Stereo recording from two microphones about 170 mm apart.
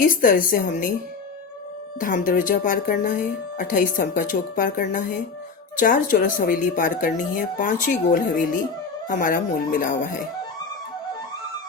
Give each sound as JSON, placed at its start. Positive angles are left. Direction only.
{"t": 0.0, "sound": "speech", "side_deg": 55}
{"t": 2.0, "sound": "speech", "side_deg": 50}